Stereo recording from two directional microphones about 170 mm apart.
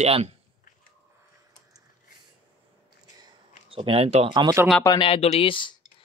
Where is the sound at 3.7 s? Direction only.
35° right (ahead or behind).